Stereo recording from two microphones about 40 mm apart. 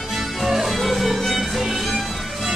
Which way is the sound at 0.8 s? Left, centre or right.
Centre.